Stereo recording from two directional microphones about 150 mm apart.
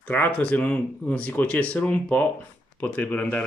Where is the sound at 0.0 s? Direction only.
10° left (ahead or behind).